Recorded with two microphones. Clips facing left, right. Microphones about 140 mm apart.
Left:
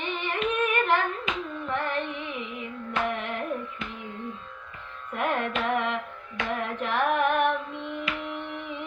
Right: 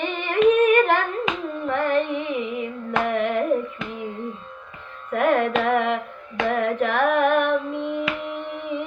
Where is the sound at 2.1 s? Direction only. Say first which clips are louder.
Right 9 dB; 55° right (ahead or behind).